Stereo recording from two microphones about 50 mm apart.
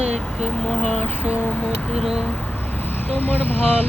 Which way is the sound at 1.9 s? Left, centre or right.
Centre.